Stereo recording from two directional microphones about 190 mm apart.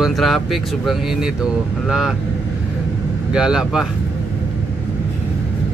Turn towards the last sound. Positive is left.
turn(degrees=-5)  # may be behind; listen again after turning